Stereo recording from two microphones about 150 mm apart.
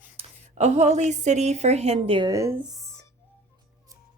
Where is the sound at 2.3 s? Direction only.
20° right (ahead or behind).